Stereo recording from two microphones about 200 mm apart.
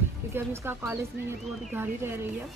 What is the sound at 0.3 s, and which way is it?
A woman's voice, 10° right (ahead or behind).